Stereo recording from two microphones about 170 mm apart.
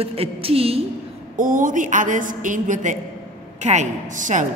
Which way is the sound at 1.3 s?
50° right (ahead or behind).